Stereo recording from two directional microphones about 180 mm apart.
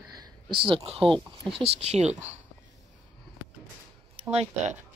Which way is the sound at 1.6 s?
35° right (ahead or behind).